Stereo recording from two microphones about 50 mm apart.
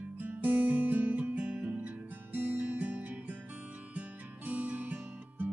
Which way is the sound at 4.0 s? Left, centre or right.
Right.